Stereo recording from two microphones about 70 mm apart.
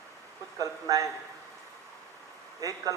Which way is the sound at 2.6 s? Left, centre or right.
Right.